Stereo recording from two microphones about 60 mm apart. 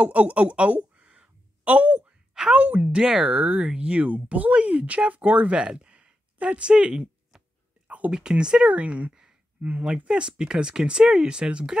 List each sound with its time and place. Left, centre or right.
0.0 s a sound: right
2.5 s speech: right
8.1 s speech: centre